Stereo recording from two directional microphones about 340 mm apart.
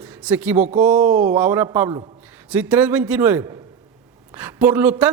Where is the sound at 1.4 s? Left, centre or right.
Centre.